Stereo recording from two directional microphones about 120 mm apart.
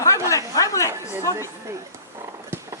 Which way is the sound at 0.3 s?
25° left (ahead or behind).